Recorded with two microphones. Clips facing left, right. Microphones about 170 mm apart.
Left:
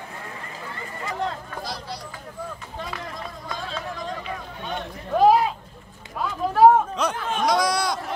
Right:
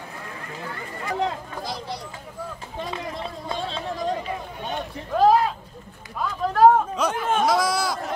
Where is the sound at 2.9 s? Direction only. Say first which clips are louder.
Right 3 dB; 25° right (ahead or behind).